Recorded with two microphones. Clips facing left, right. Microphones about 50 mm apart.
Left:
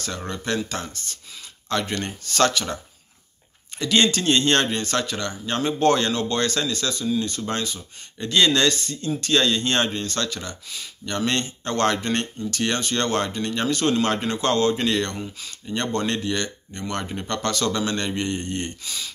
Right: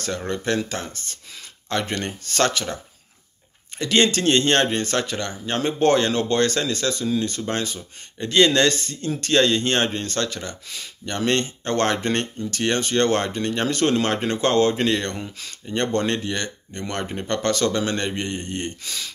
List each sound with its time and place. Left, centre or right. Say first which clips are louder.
0.7 s speech: right 1 dB; right
3.7 s speech: right 1 dB; right
15.1 s speech: even; right
15.7 s speech: right 2 dB; right